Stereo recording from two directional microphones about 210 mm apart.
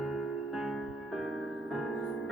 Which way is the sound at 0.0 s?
Centre (ahead or behind).